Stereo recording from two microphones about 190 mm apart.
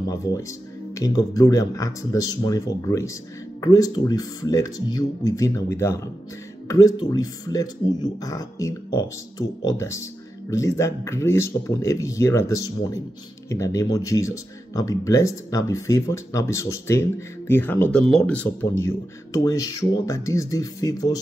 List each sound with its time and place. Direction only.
0.0 s speech: 20° left (ahead or behind)